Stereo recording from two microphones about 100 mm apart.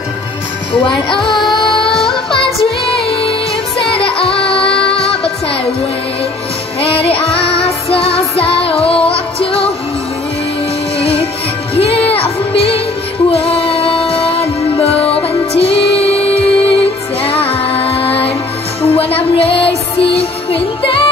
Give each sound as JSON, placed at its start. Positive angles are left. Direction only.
{"t": 0.8, "sound": "music", "side_deg": 55}
{"t": 1.9, "sound": "music", "side_deg": 5}
{"t": 2.9, "sound": "music", "side_deg": 70}
{"t": 6.8, "sound": "music", "side_deg": 75}
{"t": 11.0, "sound": "music", "side_deg": 75}